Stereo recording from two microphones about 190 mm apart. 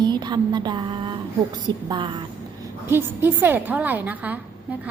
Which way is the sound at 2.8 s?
10° right (ahead or behind).